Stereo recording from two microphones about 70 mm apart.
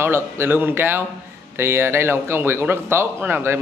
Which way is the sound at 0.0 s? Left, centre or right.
Right.